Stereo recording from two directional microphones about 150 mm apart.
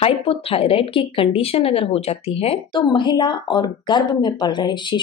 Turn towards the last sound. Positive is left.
turn(degrees=30)  # may be behind; listen again after turning